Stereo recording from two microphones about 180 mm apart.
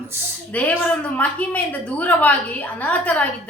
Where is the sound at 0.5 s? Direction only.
10° left (ahead or behind).